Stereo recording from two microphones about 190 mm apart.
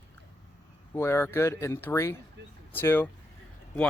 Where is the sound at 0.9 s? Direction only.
10° left (ahead or behind).